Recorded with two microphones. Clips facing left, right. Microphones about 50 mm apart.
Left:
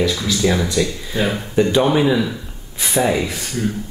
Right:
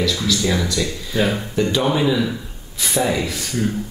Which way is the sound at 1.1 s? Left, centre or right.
Centre.